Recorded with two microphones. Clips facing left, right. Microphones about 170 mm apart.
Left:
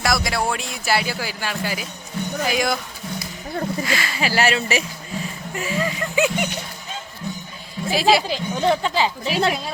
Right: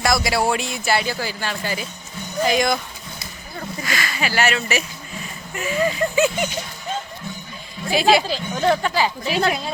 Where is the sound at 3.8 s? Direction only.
30° left (ahead or behind).